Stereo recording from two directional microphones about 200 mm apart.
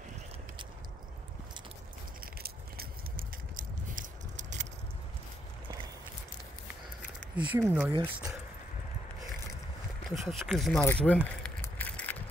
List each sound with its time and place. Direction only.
2.4 s a sound: 50° right (ahead or behind)
7.3 s speech: 10° right (ahead or behind)
7.9 s speech: 25° right (ahead or behind)
10.0 s speech: centre (ahead or behind)
10.7 s speech: 10° left (ahead or behind)
11.4 s bicycle: 5° left (ahead or behind)